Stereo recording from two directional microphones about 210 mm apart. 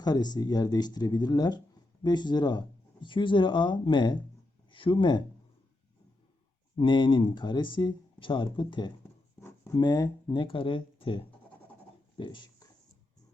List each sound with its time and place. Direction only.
0.0 s speech: 20° left (ahead or behind)
6.7 s speech: 20° left (ahead or behind)
12.1 s a sound: 25° left (ahead or behind)